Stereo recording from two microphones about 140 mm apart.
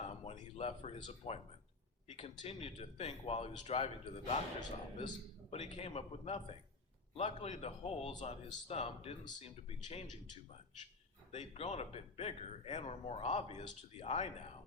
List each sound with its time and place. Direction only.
0.3 s speech: 45° left (ahead or behind)
4.6 s a man's voice: 30° left (ahead or behind)
5.5 s speech: 50° left (ahead or behind)
11.3 s speech: 50° left (ahead or behind)